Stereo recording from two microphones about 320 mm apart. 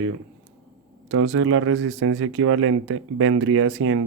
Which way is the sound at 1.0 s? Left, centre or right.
Right.